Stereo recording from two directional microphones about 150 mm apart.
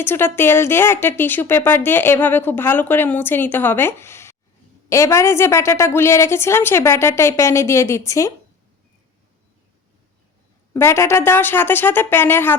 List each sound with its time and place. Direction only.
0.0 s speech: 15° left (ahead or behind)
10.8 s speech: 15° left (ahead or behind)